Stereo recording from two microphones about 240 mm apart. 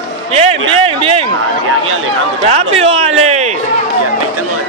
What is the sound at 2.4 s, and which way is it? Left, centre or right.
Speech, right.